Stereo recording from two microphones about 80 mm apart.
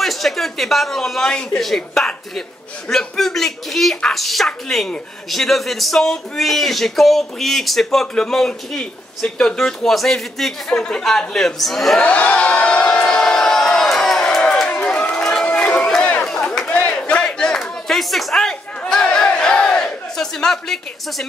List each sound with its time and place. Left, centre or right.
0.0 s speech: centre
12.0 s crowd: centre
16.7 s a sound: centre